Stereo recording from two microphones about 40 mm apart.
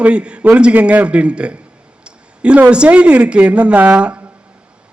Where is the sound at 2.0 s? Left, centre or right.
Right.